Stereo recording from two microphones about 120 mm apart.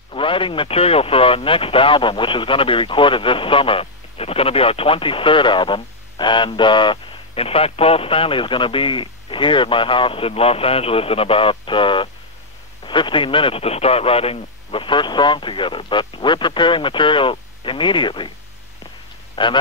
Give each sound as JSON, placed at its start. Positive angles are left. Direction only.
{"t": 0.1, "sound": "speech", "side_deg": 45}
{"t": 19.3, "sound": "speech", "side_deg": 40}